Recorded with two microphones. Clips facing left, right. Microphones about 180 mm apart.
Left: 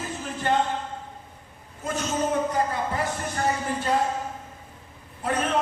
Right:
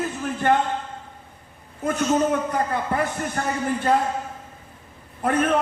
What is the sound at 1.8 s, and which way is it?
Speech, 60° right (ahead or behind).